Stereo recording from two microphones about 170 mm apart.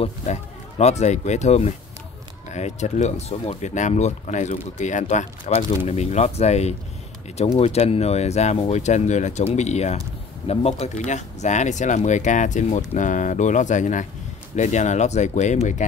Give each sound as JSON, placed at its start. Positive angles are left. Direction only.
{"t": 0.0, "sound": "speech", "side_deg": 40}